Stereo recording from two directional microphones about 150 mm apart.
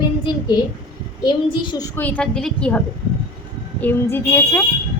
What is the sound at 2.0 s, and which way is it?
A woman's voice, 10° left (ahead or behind).